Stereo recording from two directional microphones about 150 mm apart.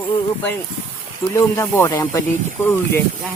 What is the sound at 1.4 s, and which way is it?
Speech, 20° left (ahead or behind).